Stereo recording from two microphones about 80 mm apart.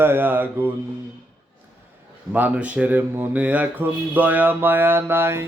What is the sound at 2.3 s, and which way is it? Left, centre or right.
Speech, centre.